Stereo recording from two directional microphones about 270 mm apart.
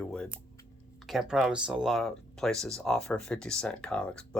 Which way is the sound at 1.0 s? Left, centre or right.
Centre.